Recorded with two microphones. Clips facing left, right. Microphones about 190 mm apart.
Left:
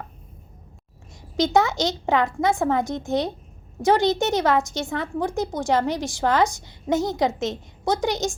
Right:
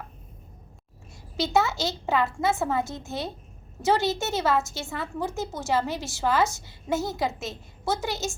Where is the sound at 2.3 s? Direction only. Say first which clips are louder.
Left 4 dB; 15° left (ahead or behind).